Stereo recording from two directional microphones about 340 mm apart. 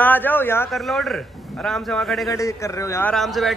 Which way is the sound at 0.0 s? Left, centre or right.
Centre.